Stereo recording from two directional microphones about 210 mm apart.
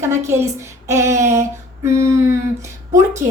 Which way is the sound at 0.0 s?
10° right (ahead or behind).